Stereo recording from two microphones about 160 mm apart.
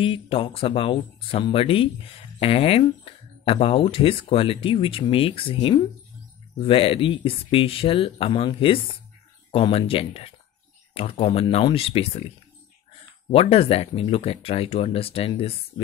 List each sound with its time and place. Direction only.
0.0 s speech: 35° left (ahead or behind)
13.3 s speech: 35° left (ahead or behind)